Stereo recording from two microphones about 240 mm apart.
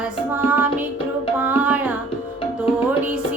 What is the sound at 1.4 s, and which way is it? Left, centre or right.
Music, centre.